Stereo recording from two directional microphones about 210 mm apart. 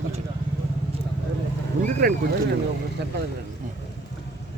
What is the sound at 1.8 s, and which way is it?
Speech, 45° right (ahead or behind).